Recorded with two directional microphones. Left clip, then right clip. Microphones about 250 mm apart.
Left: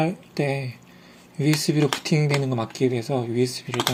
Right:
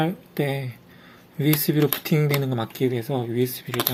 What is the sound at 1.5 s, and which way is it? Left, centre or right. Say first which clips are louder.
Speech: left 2 dB; centre.